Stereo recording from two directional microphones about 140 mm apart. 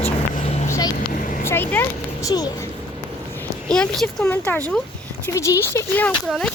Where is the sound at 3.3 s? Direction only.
10° left (ahead or behind).